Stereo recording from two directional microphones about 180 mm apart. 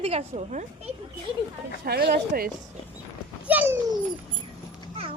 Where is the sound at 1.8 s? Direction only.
60° right (ahead or behind).